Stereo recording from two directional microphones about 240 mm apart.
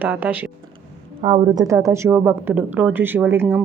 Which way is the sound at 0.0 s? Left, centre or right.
Centre.